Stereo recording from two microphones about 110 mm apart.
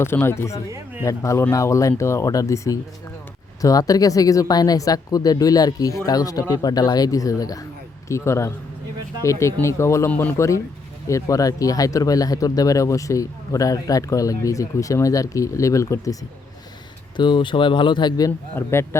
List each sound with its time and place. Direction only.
0.0 s speech: 20° left (ahead or behind)
10.1 s a man's voice: 15° left (ahead or behind)
10.3 s speech: 25° left (ahead or behind)
17.2 s speech: 45° left (ahead or behind)
18.3 s speech: 20° left (ahead or behind)